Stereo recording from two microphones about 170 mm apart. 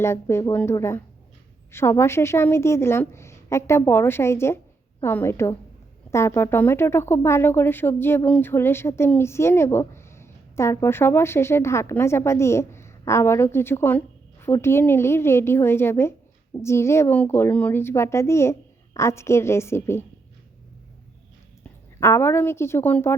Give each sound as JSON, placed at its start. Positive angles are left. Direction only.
{"t": 0.0, "sound": "speech", "side_deg": 15}
{"t": 22.0, "sound": "speech", "side_deg": 15}